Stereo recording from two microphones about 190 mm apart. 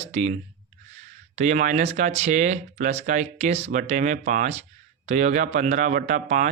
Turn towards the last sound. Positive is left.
turn(degrees=-40)  # may be behind; listen again after turning